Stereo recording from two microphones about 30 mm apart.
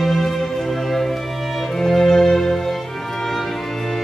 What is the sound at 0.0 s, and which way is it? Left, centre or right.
Music, centre.